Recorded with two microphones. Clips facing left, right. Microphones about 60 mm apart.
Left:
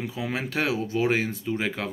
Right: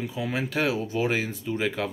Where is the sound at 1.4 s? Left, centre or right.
Left.